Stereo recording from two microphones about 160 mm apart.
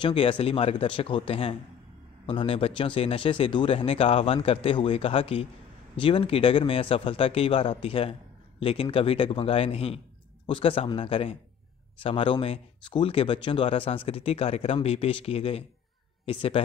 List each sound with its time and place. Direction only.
0.0 s speech: 35° left (ahead or behind)